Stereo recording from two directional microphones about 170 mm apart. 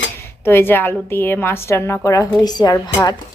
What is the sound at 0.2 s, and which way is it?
A woman's voice, 15° left (ahead or behind).